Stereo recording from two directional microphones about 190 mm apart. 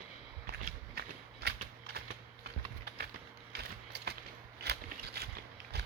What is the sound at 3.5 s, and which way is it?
Mechanisms, 60° right (ahead or behind).